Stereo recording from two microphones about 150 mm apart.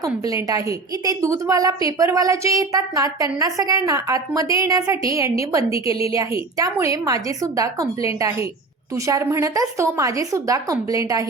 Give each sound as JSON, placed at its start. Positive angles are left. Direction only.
{"t": 0.3, "sound": "a woman's voice", "side_deg": -25}
{"t": 5.8, "sound": "a woman's voice", "side_deg": 40}
{"t": 6.1, "sound": "a woman's voice", "side_deg": -20}